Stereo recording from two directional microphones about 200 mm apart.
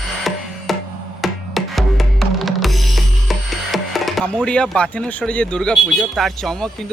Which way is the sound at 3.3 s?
Centre (ahead or behind).